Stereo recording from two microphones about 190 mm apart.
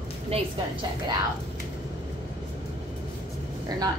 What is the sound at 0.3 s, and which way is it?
Speech, 30° right (ahead or behind).